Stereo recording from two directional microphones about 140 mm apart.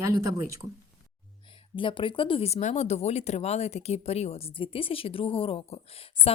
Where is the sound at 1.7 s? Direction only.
35° left (ahead or behind).